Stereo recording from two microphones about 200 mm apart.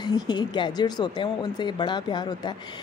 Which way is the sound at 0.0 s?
20° left (ahead or behind).